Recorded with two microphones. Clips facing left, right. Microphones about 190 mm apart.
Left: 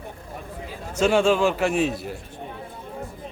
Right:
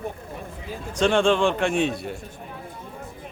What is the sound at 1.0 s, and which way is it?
A man's voice, 5° left (ahead or behind).